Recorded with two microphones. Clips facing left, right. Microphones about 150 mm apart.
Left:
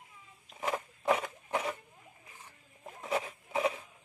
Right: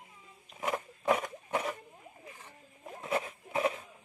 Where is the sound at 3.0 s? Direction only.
Centre (ahead or behind).